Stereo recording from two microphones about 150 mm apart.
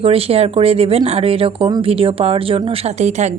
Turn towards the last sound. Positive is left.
turn(degrees=-50)  # may be behind; listen again after turning